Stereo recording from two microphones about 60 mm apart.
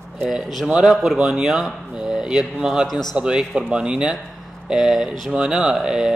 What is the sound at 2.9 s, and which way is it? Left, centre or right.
Speech, centre.